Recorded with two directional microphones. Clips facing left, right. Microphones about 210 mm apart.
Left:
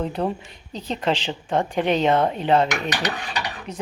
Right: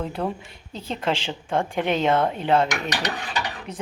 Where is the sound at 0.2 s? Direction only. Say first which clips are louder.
Left 3 dB; 15° left (ahead or behind).